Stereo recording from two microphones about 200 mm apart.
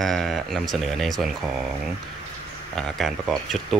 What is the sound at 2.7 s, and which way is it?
Speech, centre (ahead or behind).